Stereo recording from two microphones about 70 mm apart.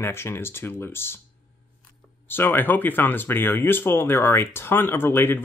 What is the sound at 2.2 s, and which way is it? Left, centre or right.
Speech, left.